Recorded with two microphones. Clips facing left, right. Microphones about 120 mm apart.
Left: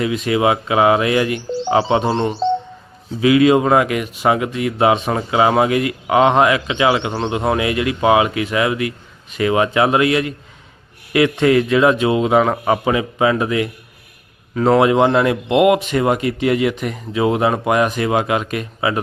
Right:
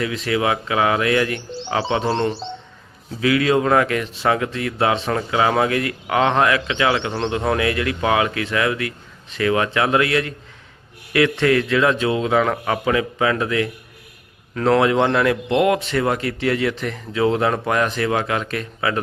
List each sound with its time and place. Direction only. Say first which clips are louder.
0.0 s a man's voice: left 4 dB; 20° left (ahead or behind)
2.1 s speech: left 2 dB; 10° left (ahead or behind)
3.2 s a man's voice: left 5 dB; 20° left (ahead or behind)
14.5 s speech: left 3 dB; 10° left (ahead or behind)